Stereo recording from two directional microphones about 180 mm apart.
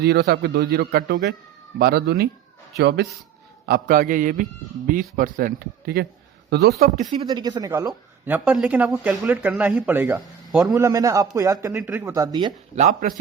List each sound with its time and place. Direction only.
0.0 s a man's voice: 65° right (ahead or behind)
3.7 s a man's voice: 55° right (ahead or behind)
7.3 s a man's voice: 20° right (ahead or behind); by 10.8 s centre (ahead or behind)
10.8 s speech: 15° right (ahead or behind)
12.7 s a man's voice: 45° right (ahead or behind)